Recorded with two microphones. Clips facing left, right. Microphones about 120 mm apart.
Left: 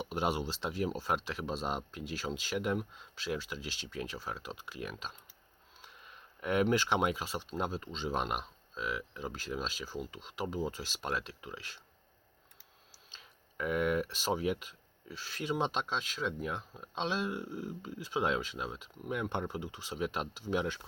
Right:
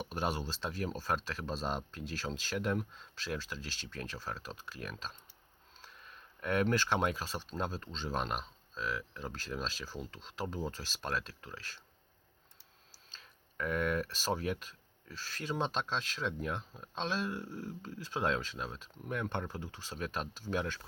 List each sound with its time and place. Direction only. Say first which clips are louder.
0.0 s speech: left 3 dB; 15° left (ahead or behind)
13.1 s speech: left 1 dB; 10° left (ahead or behind)